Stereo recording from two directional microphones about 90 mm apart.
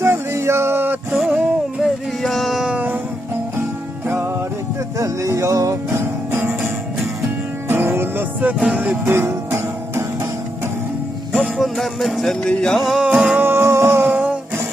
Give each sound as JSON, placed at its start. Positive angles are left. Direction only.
{"t": 0.0, "sound": "music", "side_deg": -30}
{"t": 1.1, "sound": "music", "side_deg": 0}
{"t": 2.7, "sound": "music", "side_deg": -20}
{"t": 4.0, "sound": "music", "side_deg": -25}
{"t": 4.9, "sound": "music", "side_deg": -35}
{"t": 7.7, "sound": "music", "side_deg": -25}
{"t": 11.3, "sound": "music", "side_deg": -10}
{"t": 11.5, "sound": "music", "side_deg": 0}
{"t": 13.0, "sound": "music", "side_deg": -15}
{"t": 14.1, "sound": "music", "side_deg": -15}